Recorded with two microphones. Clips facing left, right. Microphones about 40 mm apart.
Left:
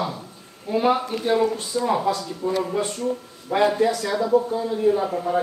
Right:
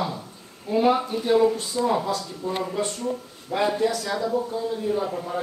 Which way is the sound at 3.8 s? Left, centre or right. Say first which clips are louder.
Left 3 dB; centre.